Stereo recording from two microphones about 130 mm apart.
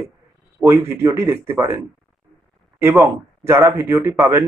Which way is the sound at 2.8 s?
20° right (ahead or behind).